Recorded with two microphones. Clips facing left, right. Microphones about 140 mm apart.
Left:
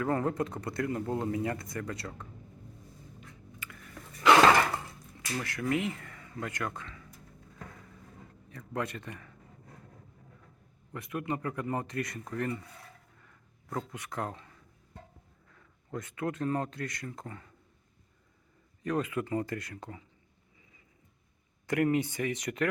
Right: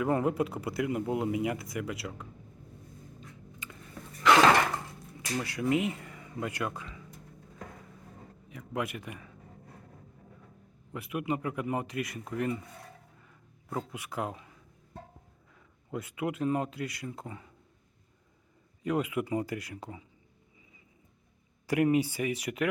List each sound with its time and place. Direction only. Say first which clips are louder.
0.0 s speech: right 2 dB; 15° right (ahead or behind)
3.6 s a sound: right 1 dB; 25° right (ahead or behind)
5.4 s speech: right 3 dB; 15° right (ahead or behind)
8.4 s speech: right 1 dB; 10° right (ahead or behind)
10.9 s speech: right 2 dB; 10° right (ahead or behind)
13.2 s a sound: even; 10° right (ahead or behind)
15.5 s speech: right 2 dB; 10° right (ahead or behind)
18.8 s speech: right 1 dB; 10° right (ahead or behind)
21.7 s speech: right 2 dB; 15° right (ahead or behind)